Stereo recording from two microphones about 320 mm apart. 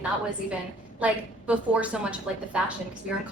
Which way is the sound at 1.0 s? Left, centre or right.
Centre.